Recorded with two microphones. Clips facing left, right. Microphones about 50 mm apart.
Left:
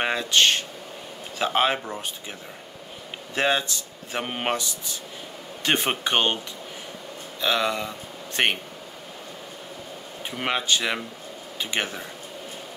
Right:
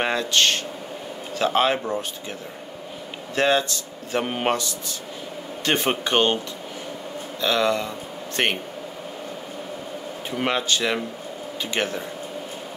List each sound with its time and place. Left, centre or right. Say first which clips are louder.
0.0 s speech: even; centre
3.3 s speech: right 3 dB; centre
5.7 s speech: right 2 dB; centre
7.4 s speech: right 3 dB; centre
10.4 s speech: right 2 dB; centre